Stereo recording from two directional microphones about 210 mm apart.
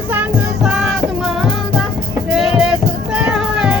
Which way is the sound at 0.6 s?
Centre (ahead or behind).